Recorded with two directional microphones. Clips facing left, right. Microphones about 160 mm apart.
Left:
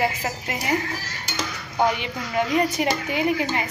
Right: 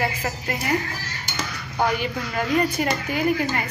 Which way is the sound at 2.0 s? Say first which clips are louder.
Left 1 dB; 20° left (ahead or behind).